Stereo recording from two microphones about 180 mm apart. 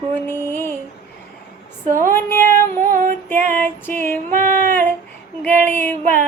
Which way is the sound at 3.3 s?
10° left (ahead or behind).